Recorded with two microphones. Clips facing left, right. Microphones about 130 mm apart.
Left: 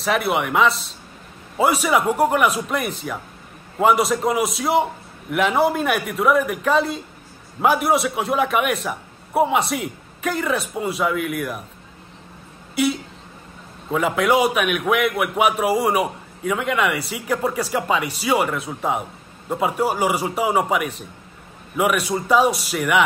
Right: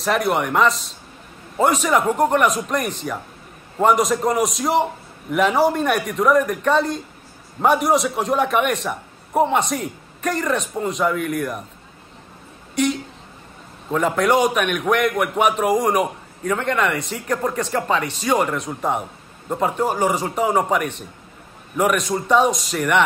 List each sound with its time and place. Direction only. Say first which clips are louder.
0.0 s a man's voice: right 1 dB; centre (ahead or behind)
12.7 s a man's voice: even; 5° left (ahead or behind)